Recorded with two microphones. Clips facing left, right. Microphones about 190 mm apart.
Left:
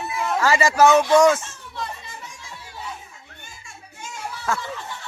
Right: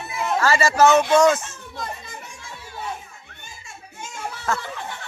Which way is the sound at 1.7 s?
45° right (ahead or behind).